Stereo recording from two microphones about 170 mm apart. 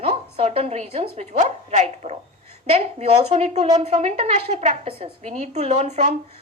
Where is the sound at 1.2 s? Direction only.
45° right (ahead or behind).